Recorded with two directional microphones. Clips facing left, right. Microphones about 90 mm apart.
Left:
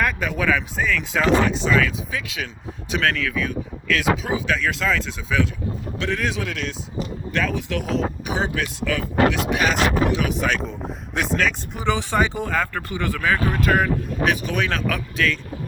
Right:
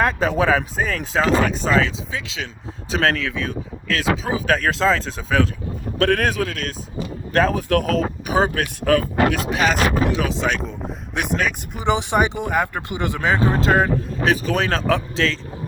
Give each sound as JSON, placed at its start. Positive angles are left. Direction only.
{"t": 0.0, "sound": "speech", "side_deg": -30}
{"t": 2.1, "sound": "speech", "side_deg": -25}
{"t": 6.0, "sound": "speech", "side_deg": -50}
{"t": 9.6, "sound": "speech", "side_deg": -35}
{"t": 10.6, "sound": "speech", "side_deg": 0}
{"t": 11.1, "sound": "speech", "side_deg": -15}